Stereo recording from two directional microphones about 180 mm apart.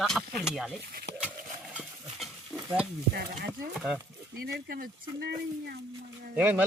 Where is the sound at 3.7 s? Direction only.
5° right (ahead or behind).